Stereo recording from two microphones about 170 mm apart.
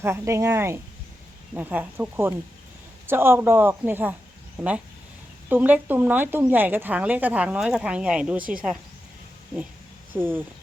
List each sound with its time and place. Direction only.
0.0 s speech: 15° right (ahead or behind)
5.5 s speech: 10° right (ahead or behind)
10.2 s speech: 10° right (ahead or behind)